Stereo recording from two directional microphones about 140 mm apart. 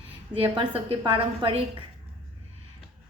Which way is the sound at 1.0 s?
40° right (ahead or behind).